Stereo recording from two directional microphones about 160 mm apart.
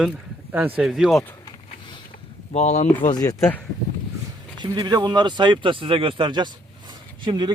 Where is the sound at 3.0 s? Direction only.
25° left (ahead or behind).